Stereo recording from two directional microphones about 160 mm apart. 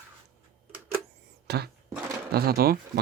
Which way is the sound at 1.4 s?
90° right.